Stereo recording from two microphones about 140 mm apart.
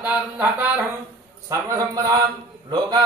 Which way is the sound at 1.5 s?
25° right (ahead or behind).